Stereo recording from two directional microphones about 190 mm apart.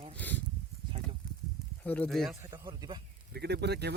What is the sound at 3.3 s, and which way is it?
Speech, 60° right (ahead or behind).